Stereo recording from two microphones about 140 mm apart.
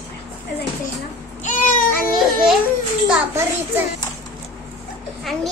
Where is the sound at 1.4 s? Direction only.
65° left (ahead or behind).